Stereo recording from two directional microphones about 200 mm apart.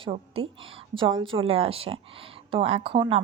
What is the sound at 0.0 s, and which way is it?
Speech, 30° right (ahead or behind).